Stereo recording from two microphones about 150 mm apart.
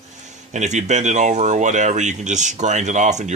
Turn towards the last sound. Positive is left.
turn(degrees=-55)  # may be behind; listen again after turning